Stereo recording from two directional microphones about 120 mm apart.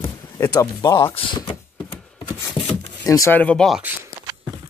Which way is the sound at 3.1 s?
25° left (ahead or behind).